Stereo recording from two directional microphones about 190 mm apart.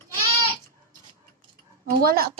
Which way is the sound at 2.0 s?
50° right (ahead or behind).